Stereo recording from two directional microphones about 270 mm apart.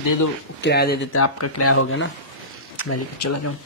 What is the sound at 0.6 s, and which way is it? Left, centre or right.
Speech, left.